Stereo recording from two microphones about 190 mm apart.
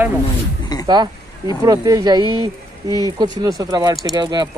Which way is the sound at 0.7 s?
20° left (ahead or behind).